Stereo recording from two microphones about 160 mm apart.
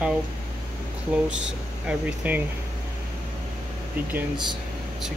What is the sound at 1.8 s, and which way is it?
Speech, 10° right (ahead or behind).